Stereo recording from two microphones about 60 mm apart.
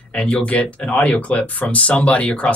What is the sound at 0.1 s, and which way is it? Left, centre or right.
Speech, centre.